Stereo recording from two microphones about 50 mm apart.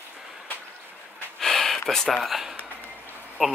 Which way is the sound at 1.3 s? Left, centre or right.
Centre.